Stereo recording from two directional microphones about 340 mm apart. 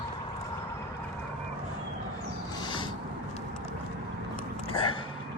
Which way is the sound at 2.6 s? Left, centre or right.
Centre.